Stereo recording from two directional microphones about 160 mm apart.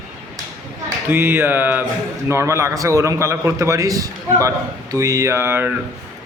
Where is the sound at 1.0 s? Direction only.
15° right (ahead or behind).